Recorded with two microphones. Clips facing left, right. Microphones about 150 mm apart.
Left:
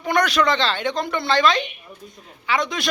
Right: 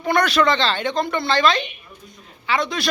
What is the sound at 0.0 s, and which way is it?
A woman's voice, 15° left (ahead or behind).